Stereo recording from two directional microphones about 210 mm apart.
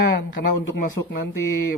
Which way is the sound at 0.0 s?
55° left (ahead or behind).